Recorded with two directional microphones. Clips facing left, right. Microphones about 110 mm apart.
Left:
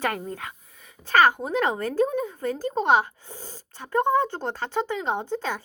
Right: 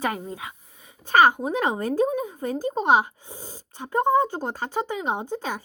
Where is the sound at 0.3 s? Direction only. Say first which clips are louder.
Left 1 dB; 15° right (ahead or behind).